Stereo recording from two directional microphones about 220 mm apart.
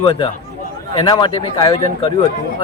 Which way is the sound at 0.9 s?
20° left (ahead or behind).